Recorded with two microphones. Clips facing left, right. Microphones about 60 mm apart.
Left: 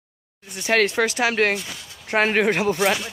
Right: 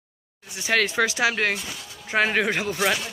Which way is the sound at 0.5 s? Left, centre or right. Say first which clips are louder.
Left 3 dB; left.